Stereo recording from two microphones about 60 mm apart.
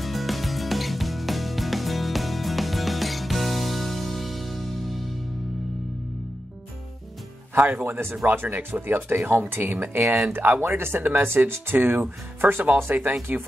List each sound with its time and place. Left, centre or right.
0.0 s music: centre
7.5 s speech: right